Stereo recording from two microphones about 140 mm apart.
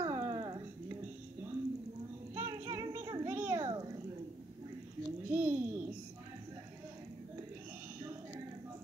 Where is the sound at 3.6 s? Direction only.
30° right (ahead or behind).